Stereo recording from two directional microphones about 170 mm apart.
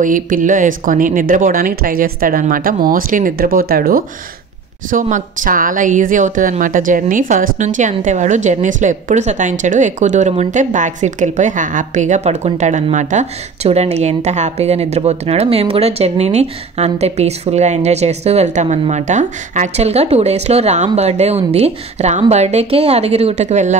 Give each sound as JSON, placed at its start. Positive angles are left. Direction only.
{"t": 0.0, "sound": "a woman's voice", "side_deg": -50}